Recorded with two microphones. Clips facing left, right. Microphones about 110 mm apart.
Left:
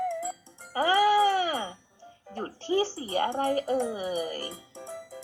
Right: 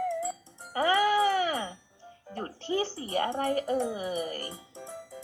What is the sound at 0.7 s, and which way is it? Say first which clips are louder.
Speech: left 1 dB; 30° left (ahead or behind).